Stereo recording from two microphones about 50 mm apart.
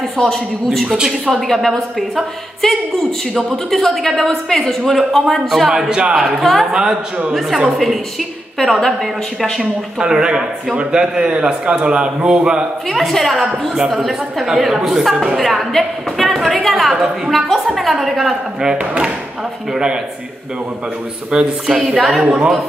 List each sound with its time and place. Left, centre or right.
0.2 s a woman's voice: centre
0.7 s a woman's voice: centre
0.9 s speech: centre
1.3 s speech: centre
3.4 s a woman's voice: centre
5.7 s a woman's voice: centre
6.7 s a woman's voice: centre
9.4 s speech: centre
12.9 s a woman's voice: centre
21.3 s speech: centre
21.8 s a woman's voice: centre